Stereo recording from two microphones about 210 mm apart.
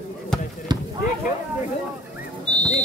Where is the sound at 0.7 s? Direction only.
20° right (ahead or behind).